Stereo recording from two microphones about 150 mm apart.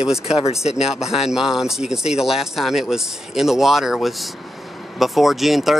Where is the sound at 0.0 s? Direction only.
5° right (ahead or behind).